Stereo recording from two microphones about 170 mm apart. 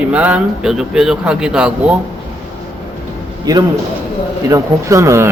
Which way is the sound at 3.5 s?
20° right (ahead or behind).